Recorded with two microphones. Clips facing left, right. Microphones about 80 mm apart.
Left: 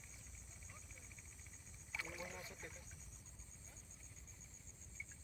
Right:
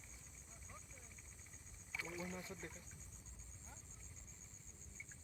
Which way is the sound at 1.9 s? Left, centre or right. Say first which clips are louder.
Right 2 dB; centre.